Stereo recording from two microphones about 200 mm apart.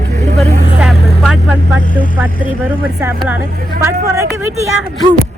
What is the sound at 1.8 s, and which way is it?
Speech, 40° left (ahead or behind).